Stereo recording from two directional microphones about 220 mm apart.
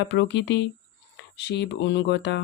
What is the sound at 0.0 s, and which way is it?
Speech, 50° left (ahead or behind).